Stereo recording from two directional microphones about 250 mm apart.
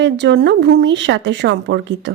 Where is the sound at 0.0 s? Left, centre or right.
Right.